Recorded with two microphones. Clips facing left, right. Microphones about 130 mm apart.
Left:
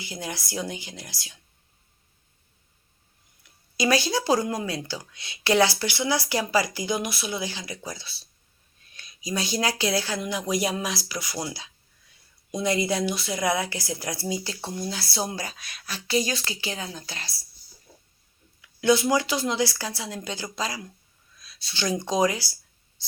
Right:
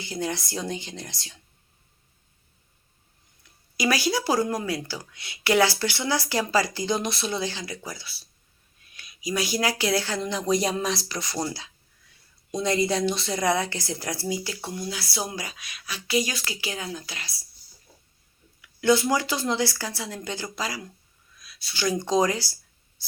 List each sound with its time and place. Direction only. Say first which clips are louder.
0.0 s speech: right 5 dB; 10° left (ahead or behind)
3.4 s speech: left 1 dB; 20° left (ahead or behind)
18.6 s speech: even; 15° left (ahead or behind)
23.0 s writing: left 1 dB; 20° left (ahead or behind)